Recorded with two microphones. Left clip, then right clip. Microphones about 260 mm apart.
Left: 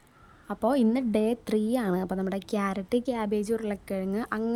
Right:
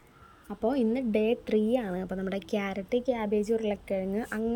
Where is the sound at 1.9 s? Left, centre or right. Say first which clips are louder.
Left 5 dB; left.